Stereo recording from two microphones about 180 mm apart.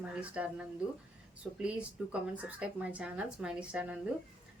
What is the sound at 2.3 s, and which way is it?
A woman's voice, 10° right (ahead or behind).